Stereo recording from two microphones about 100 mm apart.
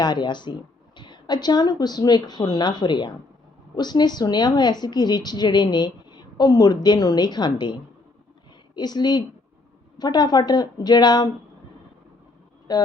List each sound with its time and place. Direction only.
0.0 s a woman's voice: 45° left (ahead or behind)
12.7 s a woman's voice: 40° left (ahead or behind)